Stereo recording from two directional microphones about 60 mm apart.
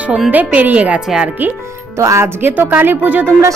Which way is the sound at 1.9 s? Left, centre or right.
Right.